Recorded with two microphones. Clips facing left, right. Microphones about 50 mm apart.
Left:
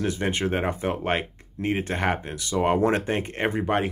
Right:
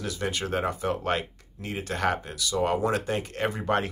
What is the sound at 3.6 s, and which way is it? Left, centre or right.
Speech, centre.